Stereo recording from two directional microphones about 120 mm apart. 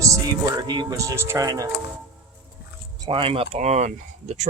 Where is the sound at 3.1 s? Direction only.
50° right (ahead or behind); by 4.4 s 75° right (ahead or behind).